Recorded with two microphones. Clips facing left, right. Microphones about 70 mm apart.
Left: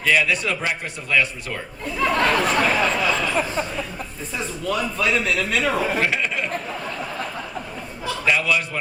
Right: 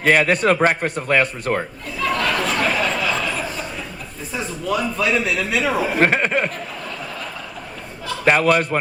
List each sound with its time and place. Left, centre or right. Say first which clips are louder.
0.0 s a man's voice: right 4 dB; right
2.0 s a sound: left 1 dB; left
4.4 s speech: right 2 dB; centre
6.0 s chuckle: right 5 dB; right
8.2 s a man's voice: right 6 dB; right